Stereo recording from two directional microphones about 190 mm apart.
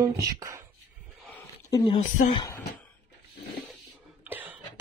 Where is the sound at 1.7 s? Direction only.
20° left (ahead or behind).